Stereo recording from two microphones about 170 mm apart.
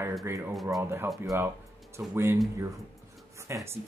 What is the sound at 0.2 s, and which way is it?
Speech, 15° right (ahead or behind).